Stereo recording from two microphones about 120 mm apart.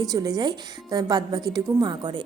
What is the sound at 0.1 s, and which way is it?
A woman's voice, 30° right (ahead or behind).